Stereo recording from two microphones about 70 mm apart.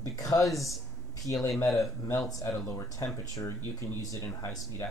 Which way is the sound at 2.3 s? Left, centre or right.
Left.